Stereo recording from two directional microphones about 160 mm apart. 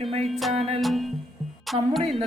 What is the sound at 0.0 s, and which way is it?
Music, 35° right (ahead or behind).